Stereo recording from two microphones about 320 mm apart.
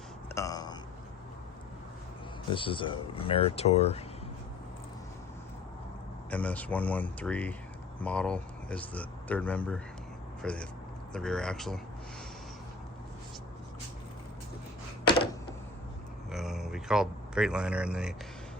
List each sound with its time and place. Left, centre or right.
0.3 s a sound: centre
2.5 s speech: centre
6.3 s speech: centre
16.3 s speech: centre